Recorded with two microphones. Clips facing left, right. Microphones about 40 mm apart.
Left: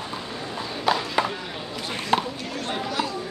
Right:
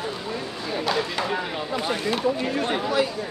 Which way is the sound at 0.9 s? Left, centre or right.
Centre.